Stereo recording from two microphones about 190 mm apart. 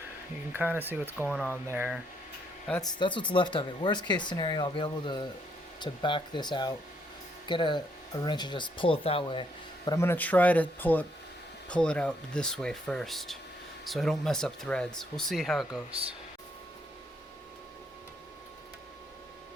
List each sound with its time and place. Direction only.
0.5 s speech: 10° right (ahead or behind)
2.8 s speech: 25° left (ahead or behind); by 15.8 s centre (ahead or behind)
15.9 s speech: 30° right (ahead or behind)